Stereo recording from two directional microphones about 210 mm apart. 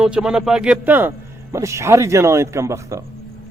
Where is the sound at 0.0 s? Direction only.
5° right (ahead or behind).